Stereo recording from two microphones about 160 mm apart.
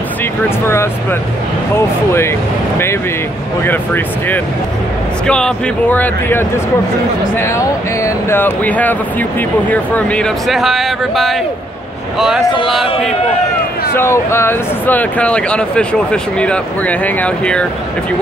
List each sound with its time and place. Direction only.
0.4 s speech: 15° left (ahead or behind)
3.6 s speech: 10° left (ahead or behind)
13.9 s speech: 15° left (ahead or behind)